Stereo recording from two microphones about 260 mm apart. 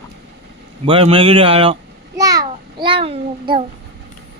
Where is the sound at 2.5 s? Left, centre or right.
Right.